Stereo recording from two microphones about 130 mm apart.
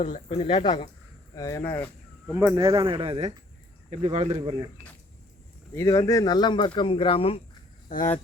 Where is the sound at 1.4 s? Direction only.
25° left (ahead or behind).